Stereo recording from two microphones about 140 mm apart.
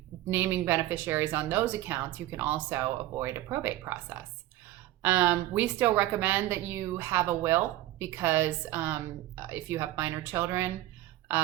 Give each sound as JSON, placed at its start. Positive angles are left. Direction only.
{"t": 0.3, "sound": "a woman's voice", "side_deg": -15}